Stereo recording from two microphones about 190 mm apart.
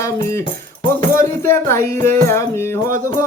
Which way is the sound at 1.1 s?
15° left (ahead or behind).